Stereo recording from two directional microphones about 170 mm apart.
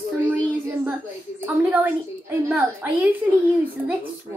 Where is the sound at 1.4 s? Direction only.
10° right (ahead or behind).